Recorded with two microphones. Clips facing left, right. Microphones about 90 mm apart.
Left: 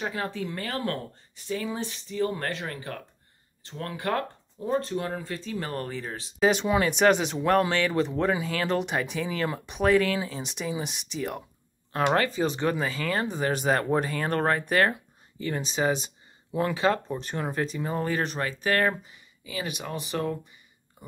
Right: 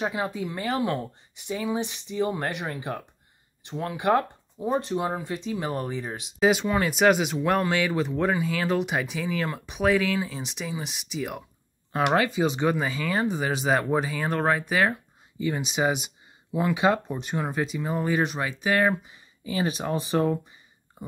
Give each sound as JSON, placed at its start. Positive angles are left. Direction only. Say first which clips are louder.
{"t": 0.0, "sound": "speech", "louder": "right 3 dB", "side_deg": -15}
{"t": 19.1, "sound": "speech", "louder": "right 6 dB", "side_deg": -30}